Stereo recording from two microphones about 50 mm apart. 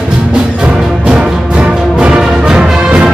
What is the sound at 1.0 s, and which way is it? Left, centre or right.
Music, right.